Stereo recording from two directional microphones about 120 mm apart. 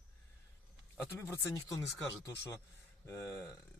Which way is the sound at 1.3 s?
20° left (ahead or behind).